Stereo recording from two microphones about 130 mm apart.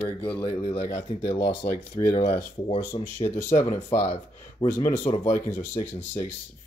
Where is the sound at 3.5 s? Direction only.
65° left (ahead or behind).